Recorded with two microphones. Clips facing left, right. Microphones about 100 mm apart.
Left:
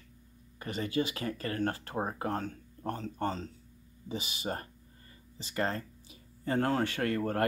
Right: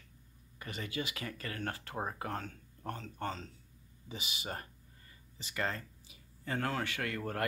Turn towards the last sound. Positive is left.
turn(degrees=40)  # may be behind; listen again after turning